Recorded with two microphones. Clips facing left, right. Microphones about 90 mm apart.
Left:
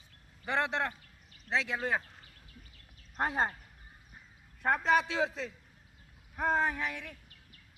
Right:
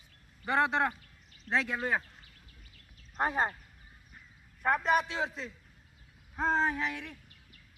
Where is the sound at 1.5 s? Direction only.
45° right (ahead or behind).